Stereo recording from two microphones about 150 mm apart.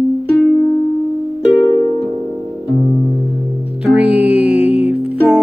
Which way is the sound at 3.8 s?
10° right (ahead or behind).